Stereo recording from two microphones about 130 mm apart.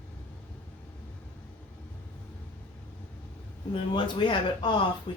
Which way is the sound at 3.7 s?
40° left (ahead or behind).